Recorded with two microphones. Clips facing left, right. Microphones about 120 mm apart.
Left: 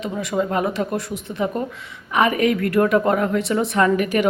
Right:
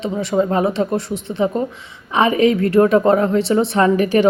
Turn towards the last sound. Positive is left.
turn(degrees=-30)  # may be behind; listen again after turning